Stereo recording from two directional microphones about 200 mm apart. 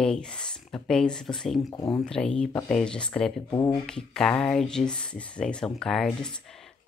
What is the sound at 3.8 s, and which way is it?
Speech, 5° left (ahead or behind).